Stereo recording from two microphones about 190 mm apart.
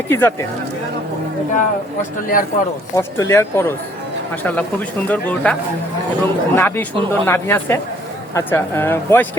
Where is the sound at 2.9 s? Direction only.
15° left (ahead or behind).